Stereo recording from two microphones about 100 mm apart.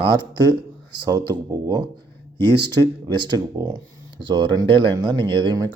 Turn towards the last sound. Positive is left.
turn(degrees=-50)  # may be behind; listen again after turning